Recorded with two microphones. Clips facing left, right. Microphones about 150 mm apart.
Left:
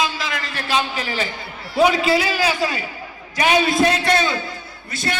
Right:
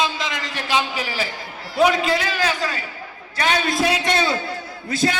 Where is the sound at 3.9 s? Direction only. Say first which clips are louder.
Left 2 dB; 20° right (ahead or behind).